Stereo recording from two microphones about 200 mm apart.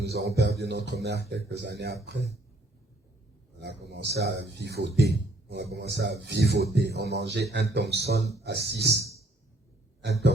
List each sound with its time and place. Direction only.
0.0 s speech: 55° right (ahead or behind)
3.6 s speech: 55° right (ahead or behind)